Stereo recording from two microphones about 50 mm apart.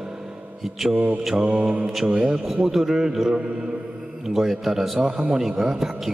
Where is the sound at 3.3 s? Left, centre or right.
Centre.